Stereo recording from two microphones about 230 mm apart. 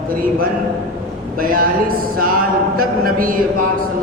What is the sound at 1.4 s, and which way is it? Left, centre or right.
Speech, right.